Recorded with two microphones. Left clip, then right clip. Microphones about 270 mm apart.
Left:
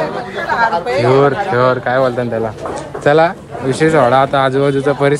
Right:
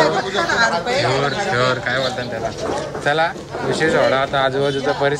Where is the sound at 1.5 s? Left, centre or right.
Centre.